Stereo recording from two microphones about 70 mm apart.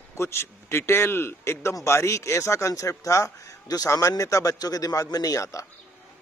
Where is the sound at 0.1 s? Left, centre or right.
Left.